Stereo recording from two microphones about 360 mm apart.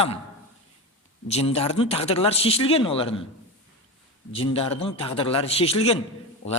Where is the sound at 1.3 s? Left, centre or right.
Centre.